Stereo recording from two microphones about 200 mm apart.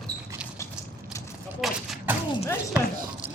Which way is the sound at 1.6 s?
Centre (ahead or behind).